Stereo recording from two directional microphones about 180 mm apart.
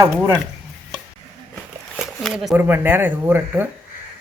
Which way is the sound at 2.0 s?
Centre (ahead or behind).